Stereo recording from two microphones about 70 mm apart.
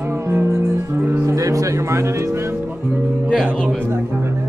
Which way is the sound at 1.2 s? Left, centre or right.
Right.